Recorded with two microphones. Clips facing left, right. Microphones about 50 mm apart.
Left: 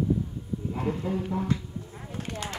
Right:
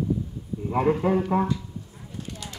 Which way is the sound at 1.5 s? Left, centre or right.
Left.